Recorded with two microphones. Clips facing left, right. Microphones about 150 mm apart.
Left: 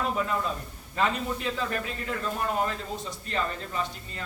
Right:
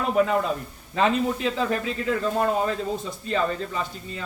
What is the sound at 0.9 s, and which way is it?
Speech, 90° right.